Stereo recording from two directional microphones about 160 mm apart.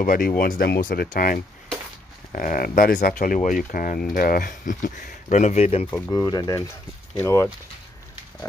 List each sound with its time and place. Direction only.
0.0 s speech: 60° left (ahead or behind); by 5.9 s 40° left (ahead or behind)
5.9 s speech: 20° left (ahead or behind)